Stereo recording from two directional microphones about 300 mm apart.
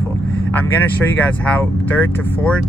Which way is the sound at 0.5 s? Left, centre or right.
Centre.